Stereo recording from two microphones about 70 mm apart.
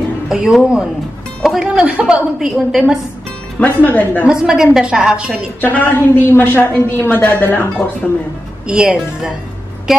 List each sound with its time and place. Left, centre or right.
0.3 s a woman's voice: centre
2.3 s a woman's voice: centre
3.5 s a woman's voice: left
4.2 s a woman's voice: centre
5.6 s a woman's voice: left
8.6 s a woman's voice: centre
9.9 s vehicle: centre